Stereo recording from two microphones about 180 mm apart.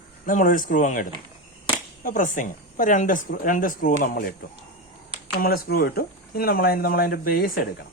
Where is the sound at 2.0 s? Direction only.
50° left (ahead or behind).